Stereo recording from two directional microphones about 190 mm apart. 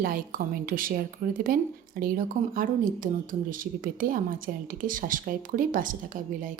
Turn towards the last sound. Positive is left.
turn(degrees=-45)  # may be behind; listen again after turning